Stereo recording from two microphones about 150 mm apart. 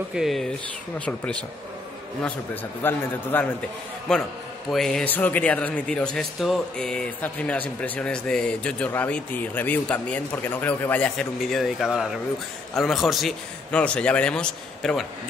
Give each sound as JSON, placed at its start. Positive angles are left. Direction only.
{"t": 0.1, "sound": "a man's voice", "side_deg": 0}